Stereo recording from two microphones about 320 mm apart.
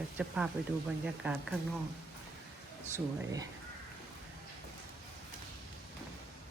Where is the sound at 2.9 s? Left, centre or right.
Centre.